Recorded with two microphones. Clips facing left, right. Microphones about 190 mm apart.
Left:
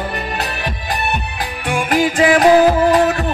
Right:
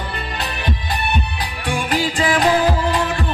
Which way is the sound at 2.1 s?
55° left (ahead or behind).